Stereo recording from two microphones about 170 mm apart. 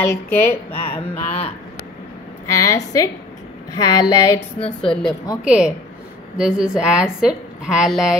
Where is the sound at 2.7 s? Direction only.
20° left (ahead or behind).